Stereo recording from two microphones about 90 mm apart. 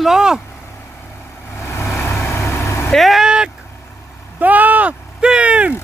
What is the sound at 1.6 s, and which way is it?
Vehicle, 30° left (ahead or behind).